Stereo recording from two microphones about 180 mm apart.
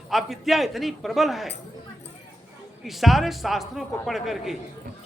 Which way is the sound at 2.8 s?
Centre (ahead or behind).